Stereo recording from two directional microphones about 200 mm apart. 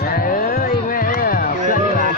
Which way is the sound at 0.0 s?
45° left (ahead or behind).